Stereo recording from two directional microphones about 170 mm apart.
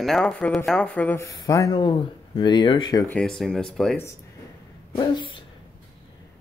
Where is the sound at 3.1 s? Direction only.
5° left (ahead or behind).